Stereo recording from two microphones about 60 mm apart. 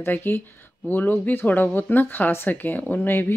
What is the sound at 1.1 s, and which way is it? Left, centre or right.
Speech, left.